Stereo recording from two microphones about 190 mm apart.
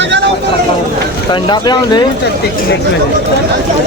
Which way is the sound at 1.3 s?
20° left (ahead or behind).